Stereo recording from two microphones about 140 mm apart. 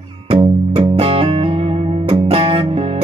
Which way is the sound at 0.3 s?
40° right (ahead or behind).